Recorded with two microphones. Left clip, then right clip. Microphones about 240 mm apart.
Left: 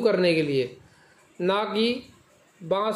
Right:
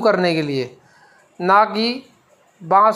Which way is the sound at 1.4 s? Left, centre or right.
Centre.